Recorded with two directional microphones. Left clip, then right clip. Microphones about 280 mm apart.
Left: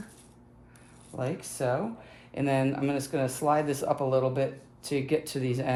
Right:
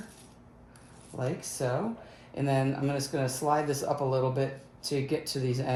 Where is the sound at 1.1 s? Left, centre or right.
Left.